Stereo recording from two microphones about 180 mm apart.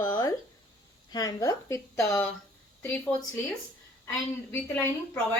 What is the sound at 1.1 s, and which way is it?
A woman's voice, 20° left (ahead or behind).